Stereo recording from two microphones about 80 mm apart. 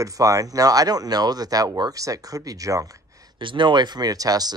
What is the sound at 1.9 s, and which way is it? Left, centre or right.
Speech, right.